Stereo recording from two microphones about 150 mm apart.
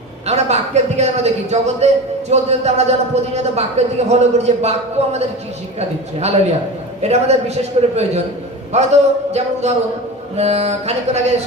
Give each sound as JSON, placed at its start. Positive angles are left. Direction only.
{"t": 0.3, "sound": "speech", "side_deg": -45}
{"t": 7.0, "sound": "speech", "side_deg": -45}